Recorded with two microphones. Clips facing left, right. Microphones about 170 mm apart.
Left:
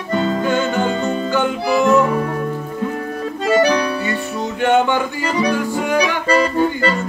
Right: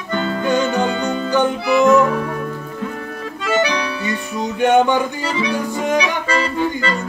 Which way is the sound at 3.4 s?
40° left (ahead or behind).